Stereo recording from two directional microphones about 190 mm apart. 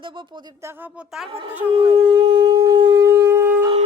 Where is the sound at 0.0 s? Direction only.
25° right (ahead or behind).